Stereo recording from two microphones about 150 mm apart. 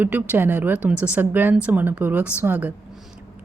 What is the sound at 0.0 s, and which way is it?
Speech, 10° right (ahead or behind).